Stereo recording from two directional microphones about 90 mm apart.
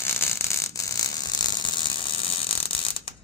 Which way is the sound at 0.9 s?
50° left (ahead or behind).